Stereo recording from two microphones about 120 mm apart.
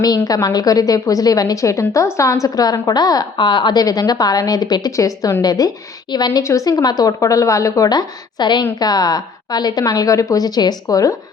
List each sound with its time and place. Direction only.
0.0 s a woman's voice: 30° left (ahead or behind)